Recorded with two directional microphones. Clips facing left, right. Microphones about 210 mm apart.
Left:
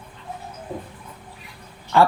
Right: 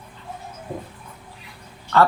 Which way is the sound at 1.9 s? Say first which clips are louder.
Even; 15° left (ahead or behind).